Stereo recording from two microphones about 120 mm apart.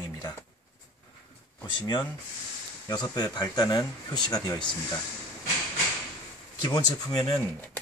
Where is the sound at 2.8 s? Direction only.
35° left (ahead or behind).